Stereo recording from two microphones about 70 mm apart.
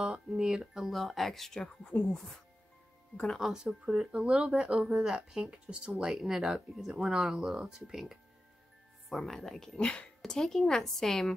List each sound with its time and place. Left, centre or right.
0.0 s speech: centre
1.9 s speech: left
3.3 s speech: centre
9.8 s speech: centre